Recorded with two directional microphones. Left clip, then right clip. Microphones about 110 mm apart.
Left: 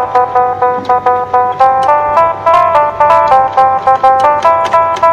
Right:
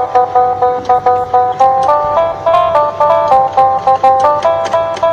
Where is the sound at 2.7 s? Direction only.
20° left (ahead or behind).